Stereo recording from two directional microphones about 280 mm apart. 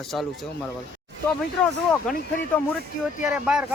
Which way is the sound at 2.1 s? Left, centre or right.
Centre.